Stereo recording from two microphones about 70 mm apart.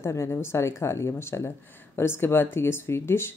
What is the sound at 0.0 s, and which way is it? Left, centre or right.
A woman's voice, left.